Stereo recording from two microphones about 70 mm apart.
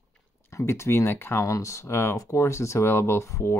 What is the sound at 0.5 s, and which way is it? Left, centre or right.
Speech, left.